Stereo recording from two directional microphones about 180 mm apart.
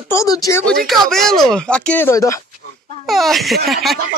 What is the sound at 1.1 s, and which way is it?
Speech, centre (ahead or behind).